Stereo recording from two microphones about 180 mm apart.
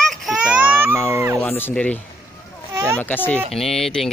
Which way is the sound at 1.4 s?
10° left (ahead or behind).